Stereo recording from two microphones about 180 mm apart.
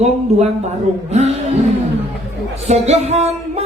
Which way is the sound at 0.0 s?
40° right (ahead or behind).